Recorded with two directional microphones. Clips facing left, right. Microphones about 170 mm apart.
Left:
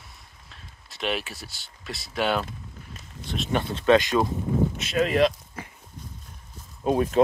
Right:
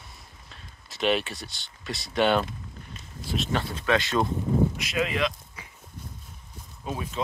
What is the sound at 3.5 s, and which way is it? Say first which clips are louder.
Speech: left 7 dB; 25° left (ahead or behind).